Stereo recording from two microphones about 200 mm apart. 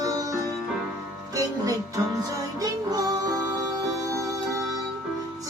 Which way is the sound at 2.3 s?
15° right (ahead or behind).